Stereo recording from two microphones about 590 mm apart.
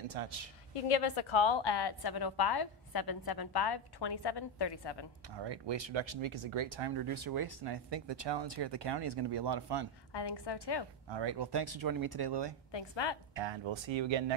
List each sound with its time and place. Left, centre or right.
0.1 s a woman's voice: right
0.7 s a woman's voice: left
5.3 s speech: right
10.1 s a woman's voice: left
11.1 s speech: right
12.7 s a woman's voice: left
13.3 s speech: right